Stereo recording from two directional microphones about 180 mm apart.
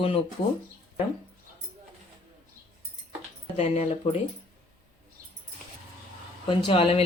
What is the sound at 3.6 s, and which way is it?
Speech, 35° left (ahead or behind).